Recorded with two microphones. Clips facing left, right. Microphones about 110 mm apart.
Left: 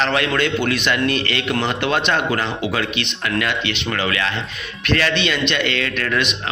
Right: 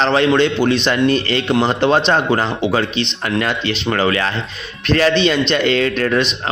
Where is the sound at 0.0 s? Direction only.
30° right (ahead or behind).